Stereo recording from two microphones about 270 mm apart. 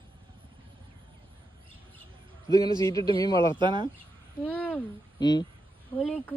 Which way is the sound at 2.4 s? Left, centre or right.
Centre.